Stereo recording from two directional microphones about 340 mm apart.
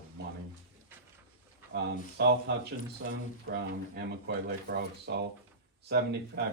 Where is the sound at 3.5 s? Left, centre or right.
Right.